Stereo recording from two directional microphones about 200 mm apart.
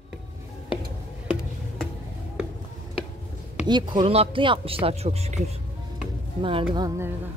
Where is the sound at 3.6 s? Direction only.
20° right (ahead or behind).